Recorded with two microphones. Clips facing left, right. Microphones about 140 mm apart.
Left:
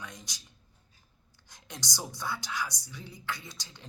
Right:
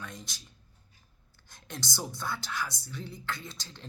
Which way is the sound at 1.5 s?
15° left (ahead or behind).